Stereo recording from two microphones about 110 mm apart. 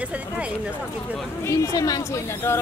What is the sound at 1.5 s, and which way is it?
Speech, 35° left (ahead or behind).